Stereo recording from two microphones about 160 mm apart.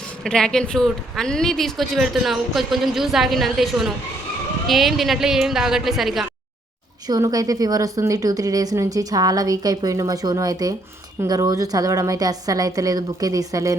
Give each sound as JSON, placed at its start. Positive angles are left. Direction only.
{"t": 0.3, "sound": "speech", "side_deg": 5}
{"t": 7.1, "sound": "a woman's voice", "side_deg": -20}